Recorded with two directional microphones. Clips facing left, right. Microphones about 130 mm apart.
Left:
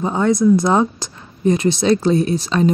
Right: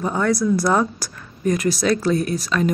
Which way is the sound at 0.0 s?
20° left (ahead or behind).